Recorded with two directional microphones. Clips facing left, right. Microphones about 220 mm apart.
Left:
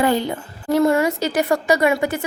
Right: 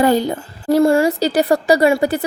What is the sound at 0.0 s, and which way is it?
A woman's voice, 40° right (ahead or behind).